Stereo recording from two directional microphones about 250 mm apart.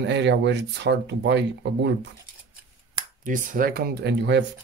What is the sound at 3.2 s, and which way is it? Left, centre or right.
Speech, right.